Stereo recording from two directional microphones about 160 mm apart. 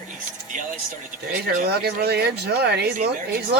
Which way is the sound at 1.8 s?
85° right.